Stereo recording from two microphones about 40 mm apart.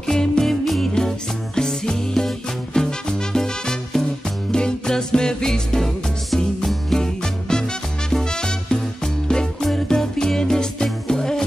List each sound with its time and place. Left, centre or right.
0.0 s music: centre
0.9 s music: centre
7.0 s music: centre